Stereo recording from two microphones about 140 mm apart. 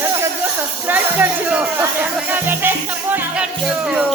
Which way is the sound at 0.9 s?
15° right (ahead or behind).